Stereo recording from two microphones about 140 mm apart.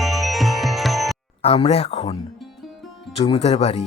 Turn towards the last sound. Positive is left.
turn(degrees=45)  # may be behind; listen again after turning